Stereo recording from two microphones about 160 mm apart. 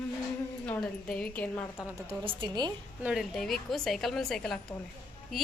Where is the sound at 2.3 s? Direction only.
25° right (ahead or behind).